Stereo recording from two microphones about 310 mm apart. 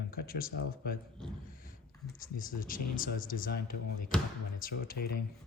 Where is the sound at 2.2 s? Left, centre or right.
Left.